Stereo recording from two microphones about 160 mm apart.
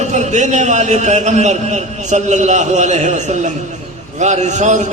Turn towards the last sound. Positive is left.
turn(degrees=-45)  # may be behind; listen again after turning